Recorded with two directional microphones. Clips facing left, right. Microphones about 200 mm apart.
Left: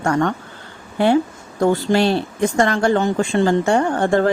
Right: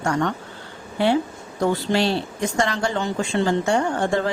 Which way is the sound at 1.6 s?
50° left (ahead or behind).